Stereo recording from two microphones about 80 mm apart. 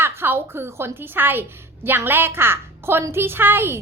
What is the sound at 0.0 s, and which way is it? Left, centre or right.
A woman's voice, right.